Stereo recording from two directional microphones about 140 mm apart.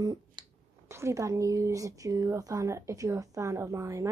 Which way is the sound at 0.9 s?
20° right (ahead or behind).